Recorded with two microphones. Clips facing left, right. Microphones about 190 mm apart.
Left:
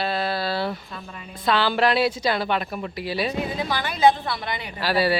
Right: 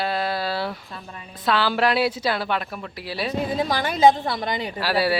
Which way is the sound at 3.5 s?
45° right (ahead or behind).